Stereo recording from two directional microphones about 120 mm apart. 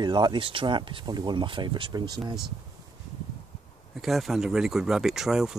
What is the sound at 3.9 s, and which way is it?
Speech, centre (ahead or behind).